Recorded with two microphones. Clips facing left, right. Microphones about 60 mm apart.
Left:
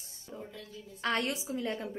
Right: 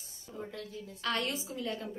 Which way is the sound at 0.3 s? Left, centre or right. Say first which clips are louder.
Right 1 dB; left.